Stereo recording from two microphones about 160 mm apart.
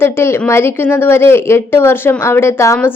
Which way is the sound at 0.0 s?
15° left (ahead or behind).